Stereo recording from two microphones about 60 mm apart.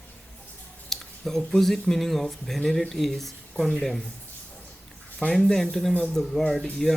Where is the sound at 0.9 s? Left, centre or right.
Centre.